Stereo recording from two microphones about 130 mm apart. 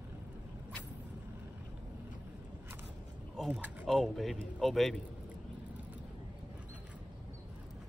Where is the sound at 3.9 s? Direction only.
Centre (ahead or behind).